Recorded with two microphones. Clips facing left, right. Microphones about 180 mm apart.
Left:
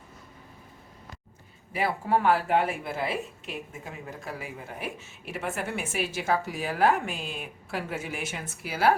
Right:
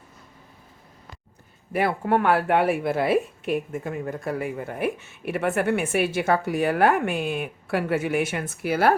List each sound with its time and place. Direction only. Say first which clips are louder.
1.7 s speech: right 4 dB; 60° right (ahead or behind)